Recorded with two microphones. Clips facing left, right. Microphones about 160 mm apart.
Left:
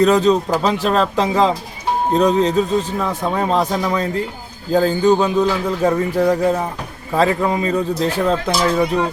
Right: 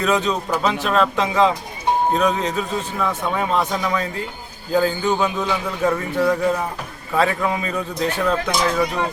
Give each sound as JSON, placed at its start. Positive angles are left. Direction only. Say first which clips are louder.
{"t": 0.0, "sound": "a man's voice", "louder": "left 7 dB", "side_deg": 35}